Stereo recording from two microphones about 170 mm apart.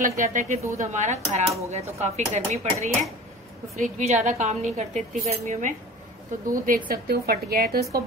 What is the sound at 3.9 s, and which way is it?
A woman's voice, 45° right (ahead or behind).